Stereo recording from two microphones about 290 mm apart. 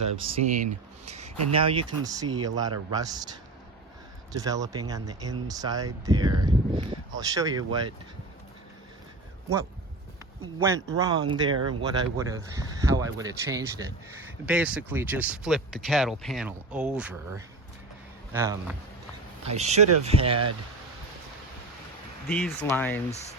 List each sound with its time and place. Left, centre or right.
0.3 s speech: right
10.6 s speech: centre
19.5 s speech: right
22.3 s speech: centre